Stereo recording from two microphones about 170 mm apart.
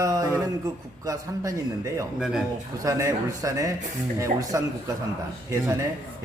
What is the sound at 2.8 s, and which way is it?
Speech, 20° right (ahead or behind).